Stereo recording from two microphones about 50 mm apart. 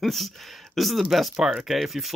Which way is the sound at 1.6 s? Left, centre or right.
Centre.